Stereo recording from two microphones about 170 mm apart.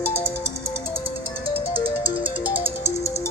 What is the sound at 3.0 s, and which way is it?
Music, 40° left (ahead or behind).